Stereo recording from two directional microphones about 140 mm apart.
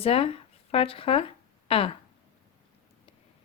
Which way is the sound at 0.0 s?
40° left (ahead or behind).